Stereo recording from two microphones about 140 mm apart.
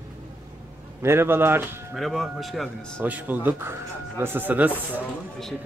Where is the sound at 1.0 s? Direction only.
15° right (ahead or behind).